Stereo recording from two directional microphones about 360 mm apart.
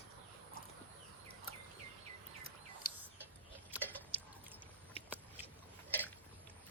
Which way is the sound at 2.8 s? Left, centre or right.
Left.